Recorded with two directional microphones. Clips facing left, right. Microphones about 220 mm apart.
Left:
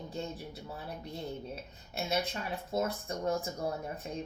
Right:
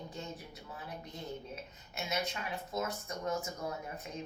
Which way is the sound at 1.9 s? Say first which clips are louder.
Left 4 dB; 30° left (ahead or behind).